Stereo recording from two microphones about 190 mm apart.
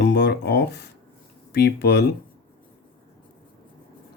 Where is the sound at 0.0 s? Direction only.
65° left (ahead or behind).